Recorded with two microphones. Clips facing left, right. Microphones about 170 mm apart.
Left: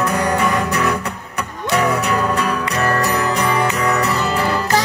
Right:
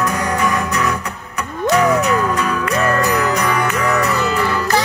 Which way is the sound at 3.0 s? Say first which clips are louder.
Right 1 dB; 30° left (ahead or behind).